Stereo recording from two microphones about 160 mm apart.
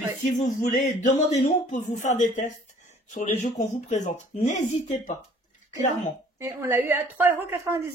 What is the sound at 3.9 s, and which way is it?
Speech, 45° left (ahead or behind).